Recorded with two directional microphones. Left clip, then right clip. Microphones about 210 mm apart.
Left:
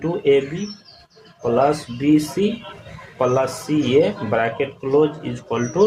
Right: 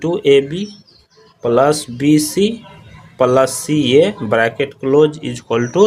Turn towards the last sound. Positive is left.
turn(degrees=-45)  # may be behind; listen again after turning